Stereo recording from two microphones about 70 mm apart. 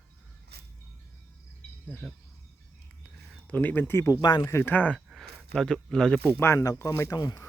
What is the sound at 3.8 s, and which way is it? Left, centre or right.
Speech, left.